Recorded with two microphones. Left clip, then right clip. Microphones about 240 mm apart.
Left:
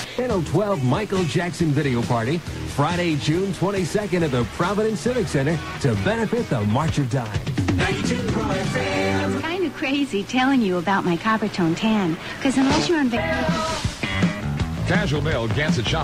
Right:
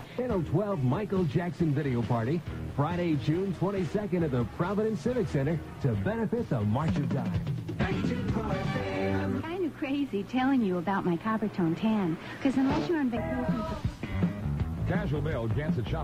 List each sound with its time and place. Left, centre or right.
0.3 s speech: centre
7.8 s music: centre
9.8 s speech: centre
13.2 s music: left
14.9 s speech: centre